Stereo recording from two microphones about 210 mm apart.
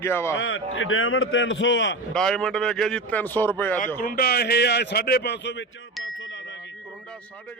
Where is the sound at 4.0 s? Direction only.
45° left (ahead or behind).